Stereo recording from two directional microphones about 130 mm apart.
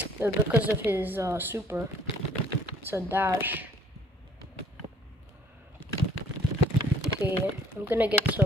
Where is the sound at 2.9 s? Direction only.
15° right (ahead or behind).